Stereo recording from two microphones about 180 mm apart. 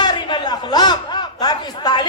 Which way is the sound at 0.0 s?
25° left (ahead or behind).